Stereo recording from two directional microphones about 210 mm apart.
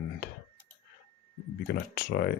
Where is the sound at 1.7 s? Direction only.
50° left (ahead or behind).